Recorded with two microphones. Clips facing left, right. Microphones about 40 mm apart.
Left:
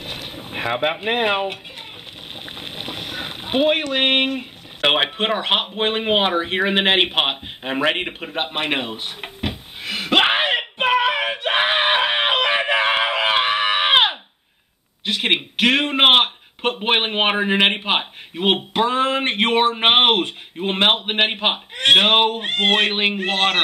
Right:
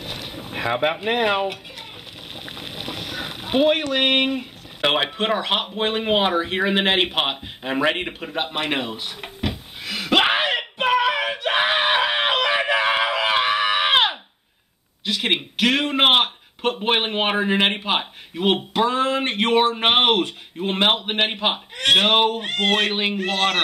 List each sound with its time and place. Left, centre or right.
0.0 s boat: centre
1.1 s a man's voice: centre
2.4 s a sound: centre
4.4 s a man's voice: centre
8.4 s a sound: centre
15.0 s a man's voice: centre